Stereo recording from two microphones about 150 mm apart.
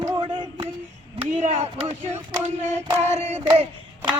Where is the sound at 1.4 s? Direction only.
50° right (ahead or behind).